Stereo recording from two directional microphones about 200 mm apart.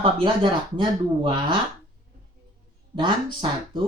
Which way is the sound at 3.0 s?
25° right (ahead or behind).